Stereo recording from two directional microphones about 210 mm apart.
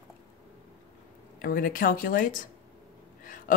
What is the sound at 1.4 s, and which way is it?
Speech, 40° left (ahead or behind).